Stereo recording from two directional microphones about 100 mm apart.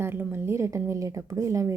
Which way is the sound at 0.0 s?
20° right (ahead or behind).